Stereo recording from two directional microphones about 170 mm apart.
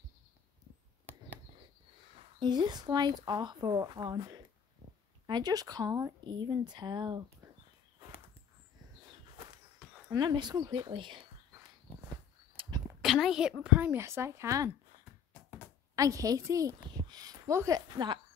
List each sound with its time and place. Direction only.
2.4 s speech: 25° right (ahead or behind)
10.0 s speech: 25° right (ahead or behind)
12.6 s a sound: 30° right (ahead or behind)
13.0 s a woman's voice: centre (ahead or behind); by 14.7 s 15° right (ahead or behind)
16.0 s speech: 20° right (ahead or behind)